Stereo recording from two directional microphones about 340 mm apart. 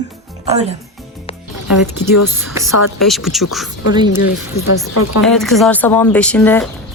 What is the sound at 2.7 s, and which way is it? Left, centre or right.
Speech, left.